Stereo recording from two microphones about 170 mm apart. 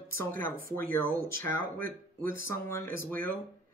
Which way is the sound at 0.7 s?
15° left (ahead or behind).